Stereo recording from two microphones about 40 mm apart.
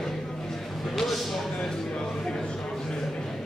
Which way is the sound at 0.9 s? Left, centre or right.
Centre.